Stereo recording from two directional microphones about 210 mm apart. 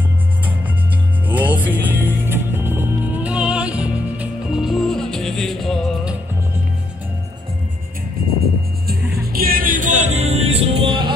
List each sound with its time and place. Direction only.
1.3 s music: 10° right (ahead or behind)
8.2 s music: 45° right (ahead or behind); by 11.1 s 25° right (ahead or behind)